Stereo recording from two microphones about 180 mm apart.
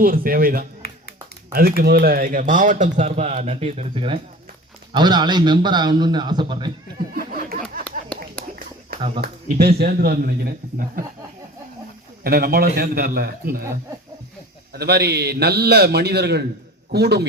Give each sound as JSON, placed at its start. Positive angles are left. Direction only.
{"t": 0.0, "sound": "a man's voice", "side_deg": -55}
{"t": 7.1, "sound": "a sound", "side_deg": -55}
{"t": 8.4, "sound": "whispering", "side_deg": 5}
{"t": 9.2, "sound": "a man's voice", "side_deg": -60}
{"t": 12.2, "sound": "a man's voice", "side_deg": -55}
{"t": 14.7, "sound": "a man's voice", "side_deg": -65}